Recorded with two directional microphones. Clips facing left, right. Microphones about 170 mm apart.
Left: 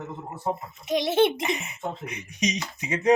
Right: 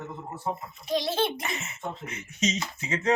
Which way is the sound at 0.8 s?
20° left (ahead or behind).